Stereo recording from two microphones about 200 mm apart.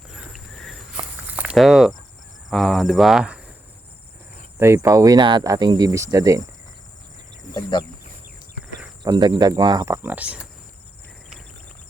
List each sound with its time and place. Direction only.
0.1 s walk: centre (ahead or behind)
2.5 s cricket: centre (ahead or behind)
4.6 s speech: 15° right (ahead or behind)
7.5 s speech: 20° left (ahead or behind)
9.0 s speech: 20° right (ahead or behind)